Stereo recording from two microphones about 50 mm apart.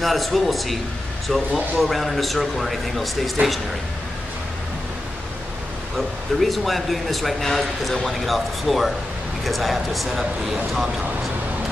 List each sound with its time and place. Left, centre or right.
0.0 s speech: centre
3.4 s speech: right
5.9 s speech: centre